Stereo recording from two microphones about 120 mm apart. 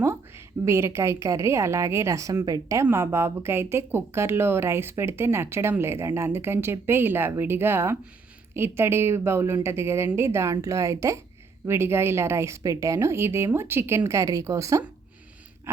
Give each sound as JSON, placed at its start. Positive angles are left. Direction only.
{"t": 0.0, "sound": "speech", "side_deg": -20}